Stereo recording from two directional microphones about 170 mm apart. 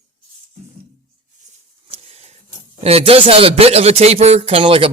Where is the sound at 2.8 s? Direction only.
35° right (ahead or behind).